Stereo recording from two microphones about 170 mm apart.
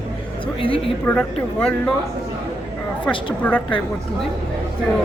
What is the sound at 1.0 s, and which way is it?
Speech, 10° left (ahead or behind).